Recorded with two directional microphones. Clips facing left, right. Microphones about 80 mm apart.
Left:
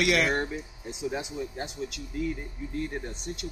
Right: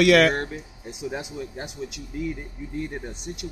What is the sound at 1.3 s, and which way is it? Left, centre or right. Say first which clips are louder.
Speech: right 1 dB; centre.